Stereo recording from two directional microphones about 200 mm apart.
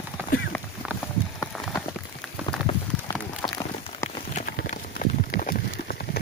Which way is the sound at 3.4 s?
20° left (ahead or behind).